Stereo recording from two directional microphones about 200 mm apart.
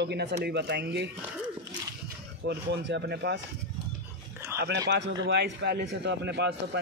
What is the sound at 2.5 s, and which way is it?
Speech, 60° right (ahead or behind).